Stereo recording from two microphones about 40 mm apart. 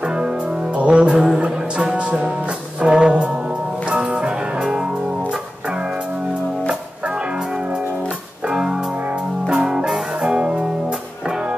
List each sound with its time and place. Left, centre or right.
0.8 s music: right
8.5 s music: centre